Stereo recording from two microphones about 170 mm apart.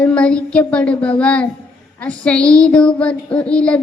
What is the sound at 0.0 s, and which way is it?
Child singing, 5° left (ahead or behind).